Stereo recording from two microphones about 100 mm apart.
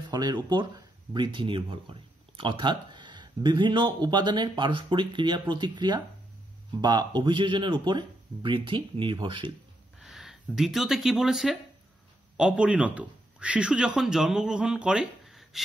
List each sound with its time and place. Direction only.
0.1 s speech: 45° right (ahead or behind)
9.9 s speech: 5° right (ahead or behind)